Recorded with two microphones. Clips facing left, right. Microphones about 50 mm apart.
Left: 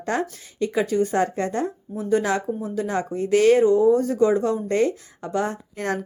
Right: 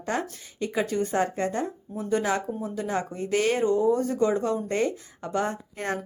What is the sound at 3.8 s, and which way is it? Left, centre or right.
Speech, left.